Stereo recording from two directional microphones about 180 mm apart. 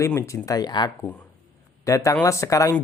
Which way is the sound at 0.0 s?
15° left (ahead or behind).